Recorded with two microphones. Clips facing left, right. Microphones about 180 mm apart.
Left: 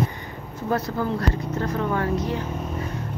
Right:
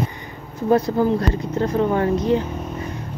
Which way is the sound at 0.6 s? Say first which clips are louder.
Right 8 dB; 15° right (ahead or behind).